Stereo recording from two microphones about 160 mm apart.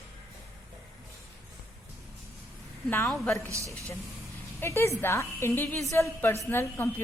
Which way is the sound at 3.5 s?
20° right (ahead or behind).